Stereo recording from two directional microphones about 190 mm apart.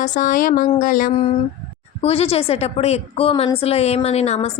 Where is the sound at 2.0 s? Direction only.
30° left (ahead or behind).